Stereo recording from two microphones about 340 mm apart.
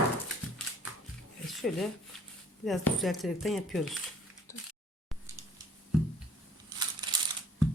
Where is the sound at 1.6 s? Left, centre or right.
Centre.